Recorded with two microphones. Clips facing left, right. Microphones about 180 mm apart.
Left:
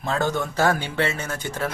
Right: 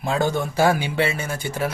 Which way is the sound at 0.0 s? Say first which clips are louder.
Right 2 dB; 10° right (ahead or behind).